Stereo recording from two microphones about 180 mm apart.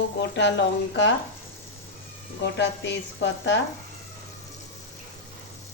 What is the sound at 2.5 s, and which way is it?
Sizzle, 75° left (ahead or behind).